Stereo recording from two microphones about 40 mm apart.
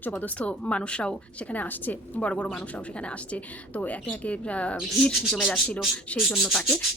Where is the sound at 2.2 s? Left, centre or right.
Left.